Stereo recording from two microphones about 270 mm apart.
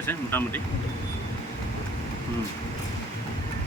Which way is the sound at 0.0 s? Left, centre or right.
Centre.